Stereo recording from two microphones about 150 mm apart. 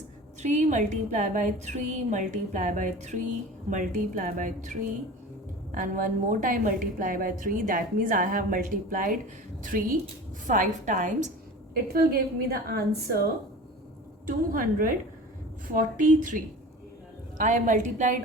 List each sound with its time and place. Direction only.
0.4 s a woman's voice: 55° right (ahead or behind)
11.7 s a woman's voice: 90° right
14.3 s a woman's voice: 65° right (ahead or behind)